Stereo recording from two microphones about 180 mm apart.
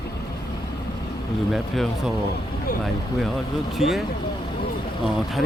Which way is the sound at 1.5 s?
Centre (ahead or behind).